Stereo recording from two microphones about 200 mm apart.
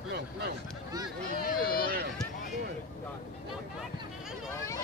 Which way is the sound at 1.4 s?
50° left (ahead or behind).